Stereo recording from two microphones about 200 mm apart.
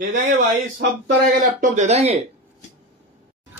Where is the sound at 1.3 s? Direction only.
40° right (ahead or behind).